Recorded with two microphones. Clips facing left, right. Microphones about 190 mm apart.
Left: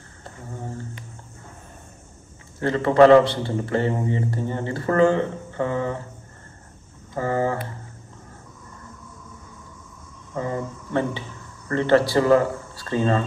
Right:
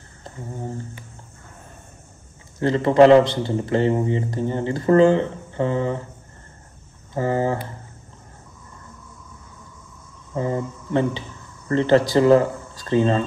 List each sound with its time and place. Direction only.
2.6 s a man's voice: 15° right (ahead or behind)
7.2 s a man's voice: 20° right (ahead or behind)
10.3 s a man's voice: 25° right (ahead or behind)